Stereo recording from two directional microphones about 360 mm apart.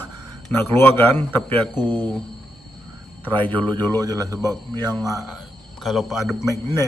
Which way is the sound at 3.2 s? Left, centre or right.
Centre.